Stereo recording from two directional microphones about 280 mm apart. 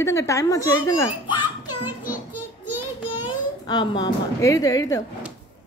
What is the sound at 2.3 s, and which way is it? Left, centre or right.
Child singing, left.